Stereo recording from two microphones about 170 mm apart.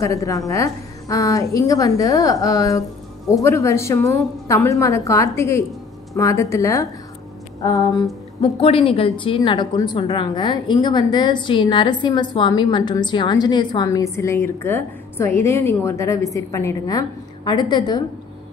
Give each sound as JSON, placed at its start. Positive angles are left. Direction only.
{"t": 0.0, "sound": "a woman's voice", "side_deg": 20}
{"t": 8.4, "sound": "a woman's voice", "side_deg": 35}